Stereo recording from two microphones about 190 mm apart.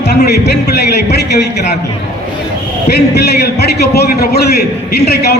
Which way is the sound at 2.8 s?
60° left (ahead or behind).